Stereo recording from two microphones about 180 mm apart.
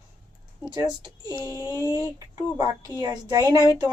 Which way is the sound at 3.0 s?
20° right (ahead or behind).